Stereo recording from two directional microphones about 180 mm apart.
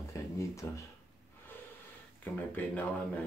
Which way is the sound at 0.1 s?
15° left (ahead or behind).